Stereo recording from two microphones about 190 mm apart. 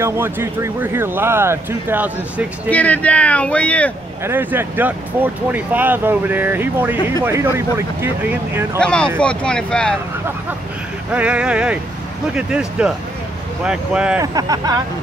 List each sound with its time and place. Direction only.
0.0 s speech: 15° right (ahead or behind)
2.7 s speech: 10° left (ahead or behind)
4.2 s speech: 10° right (ahead or behind)
8.8 s speech: 5° left (ahead or behind)
11.1 s speech: 5° right (ahead or behind)
14.2 s speech: 20° right (ahead or behind)